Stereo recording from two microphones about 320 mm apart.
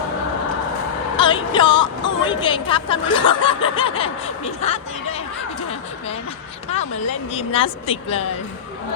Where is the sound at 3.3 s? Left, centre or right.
Centre.